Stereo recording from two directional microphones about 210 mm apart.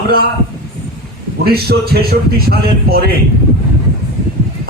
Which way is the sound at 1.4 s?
50° right (ahead or behind).